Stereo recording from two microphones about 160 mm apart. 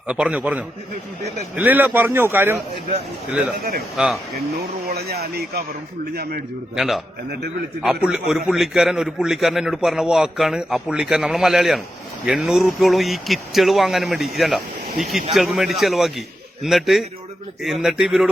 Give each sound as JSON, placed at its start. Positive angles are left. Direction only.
{"t": 0.1, "sound": "a man's voice", "side_deg": -10}
{"t": 3.6, "sound": "speech", "side_deg": -75}
{"t": 3.9, "sound": "a man's voice", "side_deg": -5}
{"t": 4.9, "sound": "speech", "side_deg": -80}
{"t": 6.7, "sound": "a man's voice", "side_deg": 0}